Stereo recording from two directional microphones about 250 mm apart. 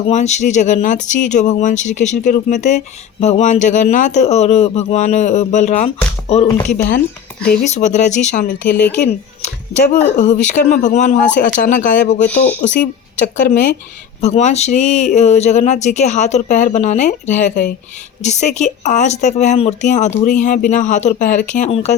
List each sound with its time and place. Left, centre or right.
0.1 s speech: left
7.6 s speech: left
8.6 s a woman's voice: left
10.2 s speech: left
12.3 s speech: centre
12.6 s speech: left